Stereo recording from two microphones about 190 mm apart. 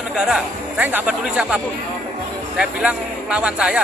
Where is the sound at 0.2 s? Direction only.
5° right (ahead or behind).